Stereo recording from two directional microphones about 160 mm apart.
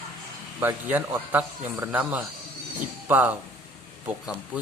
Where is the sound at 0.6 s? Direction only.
10° right (ahead or behind).